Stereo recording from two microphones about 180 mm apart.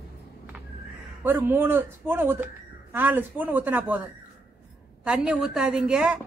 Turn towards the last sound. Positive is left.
turn(degrees=-5)  # may be behind; listen again after turning